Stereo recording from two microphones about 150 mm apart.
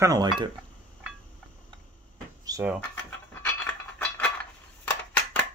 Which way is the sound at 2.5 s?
25° right (ahead or behind).